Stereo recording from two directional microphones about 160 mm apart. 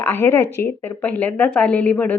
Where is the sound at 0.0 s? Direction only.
15° left (ahead or behind).